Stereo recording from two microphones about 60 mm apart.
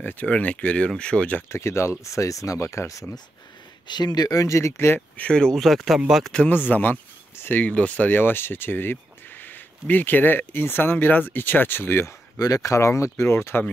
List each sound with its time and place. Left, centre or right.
0.0 s speech: left
1.5 s speech: left
2.0 s speech: left
4.2 s speech: left
5.1 s speech: left
5.4 s speech: centre
6.5 s speech: left
12.4 s speech: left